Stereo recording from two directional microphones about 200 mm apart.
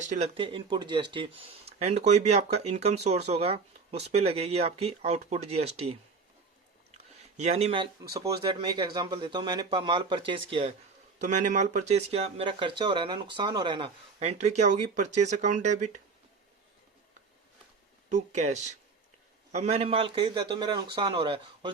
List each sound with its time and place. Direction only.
0.1 s speech: 30° right (ahead or behind)
18.1 s speech: 35° right (ahead or behind)